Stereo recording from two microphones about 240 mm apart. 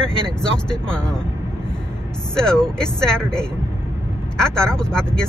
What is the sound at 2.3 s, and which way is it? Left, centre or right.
Speech, centre.